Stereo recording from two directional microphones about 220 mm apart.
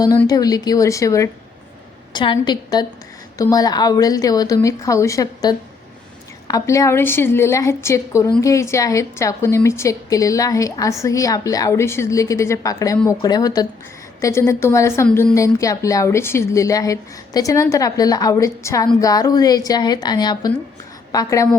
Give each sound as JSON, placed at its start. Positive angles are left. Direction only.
{"t": 0.0, "sound": "a woman's voice", "side_deg": 15}